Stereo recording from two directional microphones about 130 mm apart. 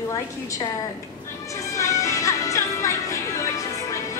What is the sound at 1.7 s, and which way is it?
Music, 25° left (ahead or behind).